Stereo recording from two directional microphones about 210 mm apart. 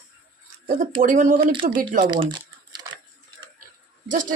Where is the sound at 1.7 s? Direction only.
40° right (ahead or behind).